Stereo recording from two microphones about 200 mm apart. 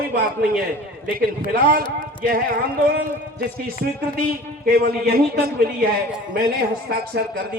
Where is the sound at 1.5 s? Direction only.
45° right (ahead or behind).